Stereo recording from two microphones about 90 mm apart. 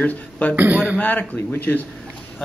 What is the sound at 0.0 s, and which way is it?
Speech, 15° left (ahead or behind).